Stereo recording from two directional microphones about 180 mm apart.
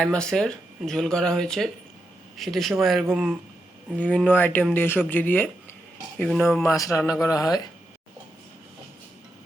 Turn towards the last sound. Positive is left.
turn(degrees=20)  # may be behind; listen again after turning